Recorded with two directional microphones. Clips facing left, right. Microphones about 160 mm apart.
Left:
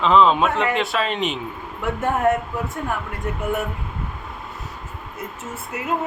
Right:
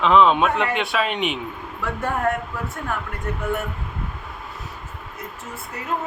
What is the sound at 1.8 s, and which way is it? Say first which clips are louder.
Speech: left 3 dB; 20° left (ahead or behind).